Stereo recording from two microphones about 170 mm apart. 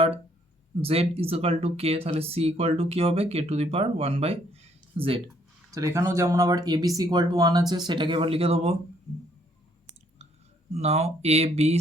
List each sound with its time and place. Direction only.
0.8 s speech: 35° right (ahead or behind)
5.7 s speech: 20° right (ahead or behind); by 8.7 s 35° right (ahead or behind)
10.8 s speech: 40° right (ahead or behind)